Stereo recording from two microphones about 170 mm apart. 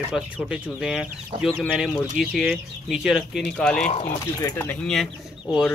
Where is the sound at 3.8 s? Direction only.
35° left (ahead or behind).